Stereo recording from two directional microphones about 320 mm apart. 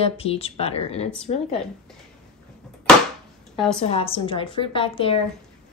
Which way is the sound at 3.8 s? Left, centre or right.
Centre.